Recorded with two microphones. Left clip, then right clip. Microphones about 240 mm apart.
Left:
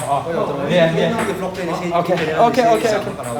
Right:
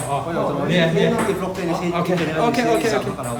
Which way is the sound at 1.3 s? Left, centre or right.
Centre.